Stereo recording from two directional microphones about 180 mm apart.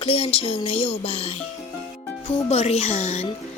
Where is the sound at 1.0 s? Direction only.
30° left (ahead or behind).